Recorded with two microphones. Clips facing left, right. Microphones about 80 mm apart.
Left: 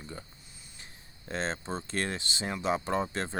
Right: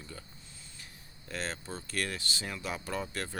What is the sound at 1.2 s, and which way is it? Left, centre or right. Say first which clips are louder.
Speech: left 5 dB; left.